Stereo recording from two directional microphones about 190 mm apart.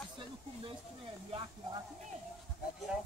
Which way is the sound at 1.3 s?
30° right (ahead or behind).